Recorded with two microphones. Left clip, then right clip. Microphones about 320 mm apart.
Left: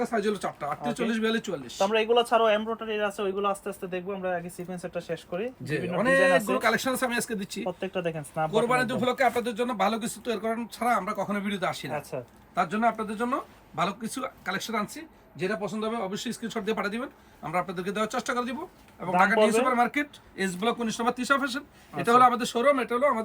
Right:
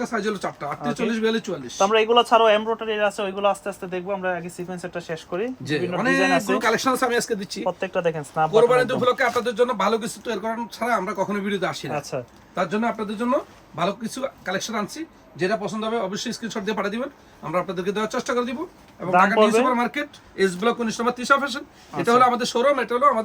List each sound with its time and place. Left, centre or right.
0.1 s speech: centre
1.8 s speech: right
6.6 s speech: centre
7.8 s speech: right
8.6 s speech: centre
12.1 s a man's voice: right
12.5 s speech: centre
19.1 s a man's voice: right
19.7 s speech: centre